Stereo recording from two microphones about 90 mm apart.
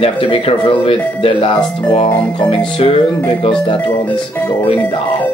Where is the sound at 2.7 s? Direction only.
70° left (ahead or behind).